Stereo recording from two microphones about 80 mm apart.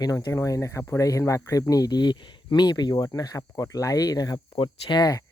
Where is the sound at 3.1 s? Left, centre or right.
Left.